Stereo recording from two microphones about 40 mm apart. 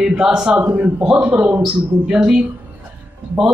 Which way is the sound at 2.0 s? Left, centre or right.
Right.